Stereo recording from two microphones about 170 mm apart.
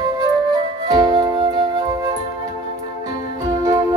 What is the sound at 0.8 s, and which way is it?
Music, 25° right (ahead or behind).